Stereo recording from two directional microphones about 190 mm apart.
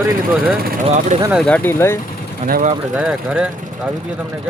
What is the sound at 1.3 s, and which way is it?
Speech, 5° left (ahead or behind).